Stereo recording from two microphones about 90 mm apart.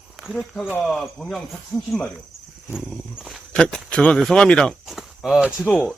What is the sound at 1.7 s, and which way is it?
Speech, 40° left (ahead or behind).